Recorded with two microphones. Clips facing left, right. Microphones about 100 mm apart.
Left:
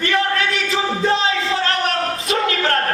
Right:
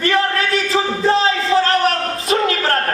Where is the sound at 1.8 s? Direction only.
35° right (ahead or behind).